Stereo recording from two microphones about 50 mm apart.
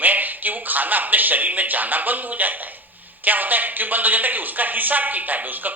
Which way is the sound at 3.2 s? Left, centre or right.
Right.